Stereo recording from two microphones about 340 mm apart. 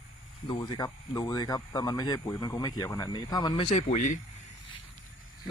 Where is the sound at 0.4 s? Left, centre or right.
Centre.